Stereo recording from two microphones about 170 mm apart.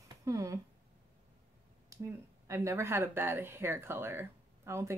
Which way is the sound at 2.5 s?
15° right (ahead or behind).